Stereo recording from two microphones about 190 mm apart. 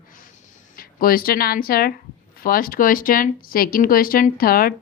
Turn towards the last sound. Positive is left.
turn(degrees=50)  # may be behind; listen again after turning